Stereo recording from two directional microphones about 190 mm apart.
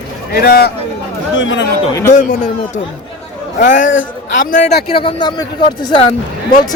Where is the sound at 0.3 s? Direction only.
55° left (ahead or behind).